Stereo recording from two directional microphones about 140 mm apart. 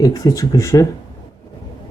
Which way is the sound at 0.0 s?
25° left (ahead or behind).